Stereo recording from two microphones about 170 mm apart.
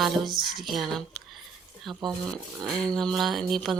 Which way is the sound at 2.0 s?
25° right (ahead or behind).